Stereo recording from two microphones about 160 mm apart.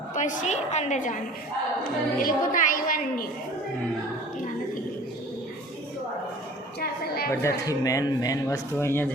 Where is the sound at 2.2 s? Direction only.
60° left (ahead or behind).